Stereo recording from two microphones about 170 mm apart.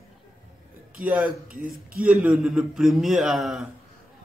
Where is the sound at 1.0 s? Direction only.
5° right (ahead or behind).